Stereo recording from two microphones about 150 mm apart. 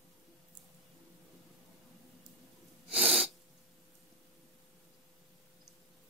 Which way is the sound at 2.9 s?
5° right (ahead or behind).